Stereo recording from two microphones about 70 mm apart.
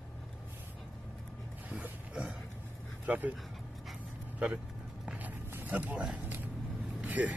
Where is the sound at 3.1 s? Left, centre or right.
Right.